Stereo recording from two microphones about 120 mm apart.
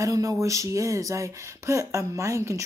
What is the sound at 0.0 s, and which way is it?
Speech, 30° right (ahead or behind).